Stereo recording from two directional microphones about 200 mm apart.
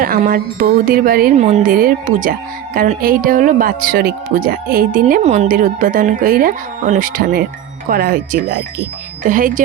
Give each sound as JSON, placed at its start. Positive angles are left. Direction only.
{"t": 0.3, "sound": "speech", "side_deg": -50}
{"t": 1.4, "sound": "speech", "side_deg": -35}